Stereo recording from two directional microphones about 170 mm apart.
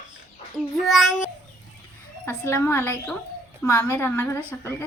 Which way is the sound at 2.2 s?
15° left (ahead or behind).